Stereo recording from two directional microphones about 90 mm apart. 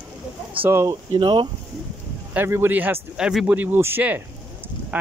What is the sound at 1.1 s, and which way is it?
Speech, 60° right (ahead or behind).